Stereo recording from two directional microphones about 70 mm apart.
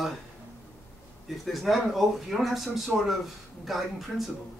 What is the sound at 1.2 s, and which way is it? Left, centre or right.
Speech, centre.